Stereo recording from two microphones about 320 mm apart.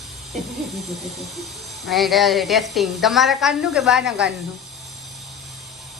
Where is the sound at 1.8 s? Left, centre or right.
Centre.